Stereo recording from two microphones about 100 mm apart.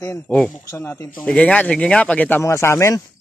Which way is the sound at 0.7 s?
25° left (ahead or behind).